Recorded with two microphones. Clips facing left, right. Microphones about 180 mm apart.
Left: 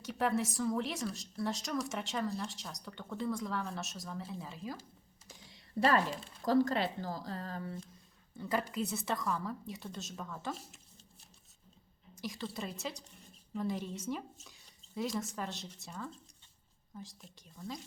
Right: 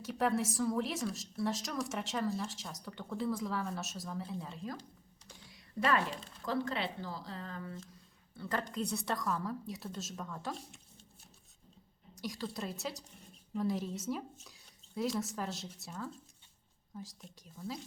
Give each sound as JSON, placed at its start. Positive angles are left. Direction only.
{"t": 0.0, "sound": "a woman's voice", "side_deg": 0}
{"t": 5.5, "sound": "computer keyboard", "side_deg": 30}
{"t": 6.4, "sound": "speech", "side_deg": 40}
{"t": 8.4, "sound": "a woman's voice", "side_deg": 10}
{"t": 12.1, "sound": "a woman's voice", "side_deg": 0}